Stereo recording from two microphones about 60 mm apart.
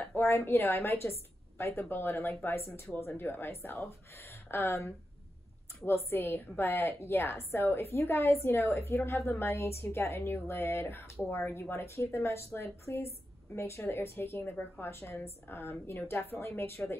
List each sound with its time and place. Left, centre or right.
0.2 s a woman's voice: left